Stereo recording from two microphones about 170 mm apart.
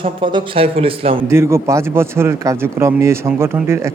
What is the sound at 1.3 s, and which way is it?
Speech, 15° right (ahead or behind).